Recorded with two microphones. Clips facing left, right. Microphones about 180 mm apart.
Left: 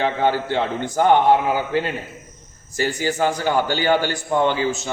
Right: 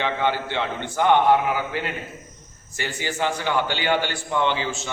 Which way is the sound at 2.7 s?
40° left (ahead or behind).